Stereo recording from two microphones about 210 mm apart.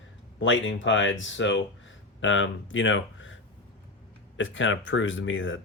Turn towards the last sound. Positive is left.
turn(degrees=65)  # may be behind; listen again after turning